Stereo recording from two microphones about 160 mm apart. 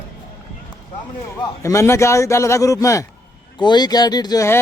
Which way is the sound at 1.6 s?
20° left (ahead or behind).